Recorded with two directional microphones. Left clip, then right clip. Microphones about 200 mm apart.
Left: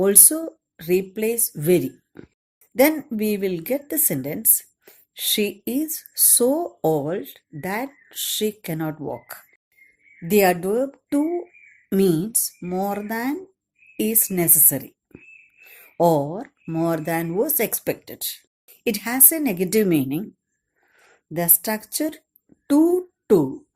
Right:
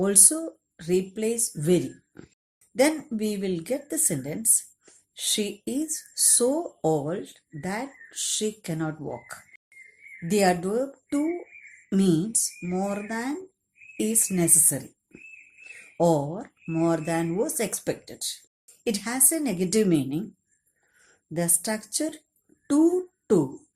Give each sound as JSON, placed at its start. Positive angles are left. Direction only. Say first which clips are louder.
{"t": 0.0, "sound": "speech", "louder": "left 5 dB", "side_deg": 40}